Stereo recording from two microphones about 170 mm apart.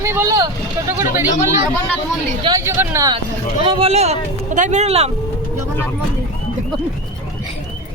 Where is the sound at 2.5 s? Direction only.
15° right (ahead or behind).